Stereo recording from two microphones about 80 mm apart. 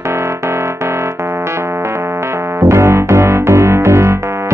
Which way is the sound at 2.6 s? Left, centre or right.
Right.